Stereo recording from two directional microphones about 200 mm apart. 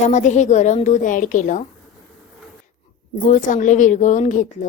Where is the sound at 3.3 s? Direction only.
40° left (ahead or behind).